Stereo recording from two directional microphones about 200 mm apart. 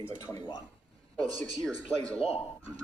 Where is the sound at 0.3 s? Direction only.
20° left (ahead or behind).